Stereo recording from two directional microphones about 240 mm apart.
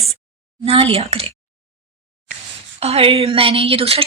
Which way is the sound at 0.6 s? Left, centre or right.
Right.